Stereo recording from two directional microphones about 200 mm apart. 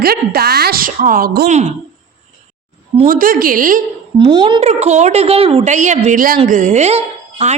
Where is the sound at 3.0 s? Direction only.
45° right (ahead or behind).